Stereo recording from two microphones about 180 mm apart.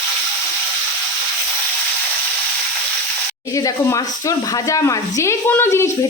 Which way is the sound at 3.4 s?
20° left (ahead or behind).